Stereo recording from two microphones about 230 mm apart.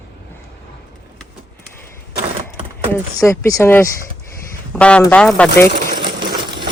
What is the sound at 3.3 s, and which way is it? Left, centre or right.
Speech, centre.